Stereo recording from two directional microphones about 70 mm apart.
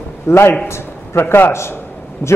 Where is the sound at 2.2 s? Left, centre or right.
Left.